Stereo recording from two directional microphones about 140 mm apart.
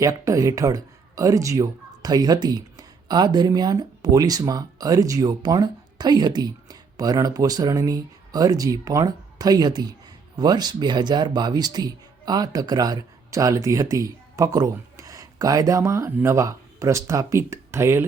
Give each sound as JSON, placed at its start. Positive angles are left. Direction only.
{"t": 0.0, "sound": "speech", "side_deg": -25}